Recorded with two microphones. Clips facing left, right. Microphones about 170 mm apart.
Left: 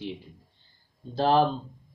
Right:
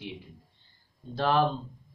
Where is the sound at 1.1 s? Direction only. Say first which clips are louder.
Left 3 dB; 35° left (ahead or behind).